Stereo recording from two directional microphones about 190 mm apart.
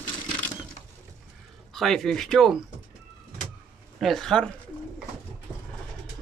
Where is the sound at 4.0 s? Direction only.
Centre (ahead or behind).